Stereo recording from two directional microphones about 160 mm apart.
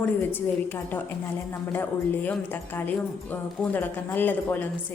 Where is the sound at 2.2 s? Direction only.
10° left (ahead or behind).